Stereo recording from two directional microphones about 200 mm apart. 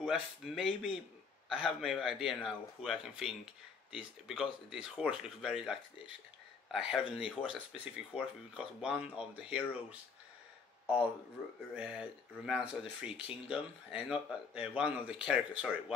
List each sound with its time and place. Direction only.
0.0 s speech: 5° right (ahead or behind)
11.7 s speech: 5° right (ahead or behind)